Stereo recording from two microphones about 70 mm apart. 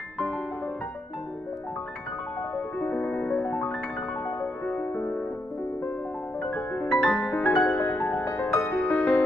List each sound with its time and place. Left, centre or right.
2.5 s music: left
6.4 s music: centre
7.7 s music: left